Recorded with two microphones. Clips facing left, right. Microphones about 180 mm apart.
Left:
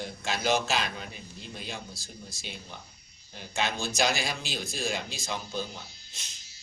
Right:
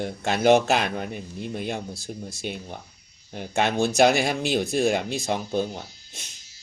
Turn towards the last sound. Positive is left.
turn(degrees=-55)  # may be behind; listen again after turning